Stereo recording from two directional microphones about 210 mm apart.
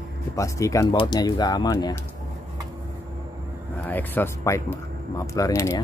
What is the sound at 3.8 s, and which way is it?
Speech, 10° left (ahead or behind).